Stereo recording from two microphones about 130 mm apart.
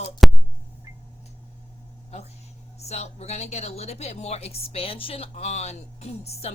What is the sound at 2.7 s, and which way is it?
A woman's voice, 55° left (ahead or behind).